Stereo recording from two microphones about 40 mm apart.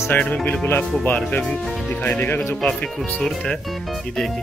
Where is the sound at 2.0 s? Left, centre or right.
Left.